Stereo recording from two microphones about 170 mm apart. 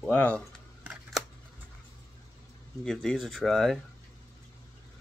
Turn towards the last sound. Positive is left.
turn(degrees=0)  # may be behind; listen again after turning